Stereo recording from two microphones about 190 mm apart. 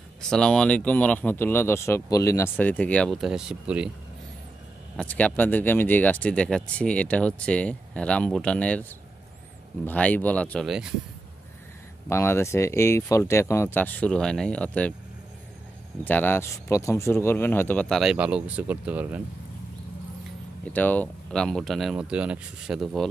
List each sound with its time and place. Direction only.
0.2 s speech: 5° left (ahead or behind)
4.9 s speech: 5° left (ahead or behind)
9.8 s speech: 10° left (ahead or behind)
12.1 s speech: 15° left (ahead or behind)
16.0 s speech: 10° left (ahead or behind); by 19.2 s 10° right (ahead or behind)
20.6 s speech: 10° left (ahead or behind)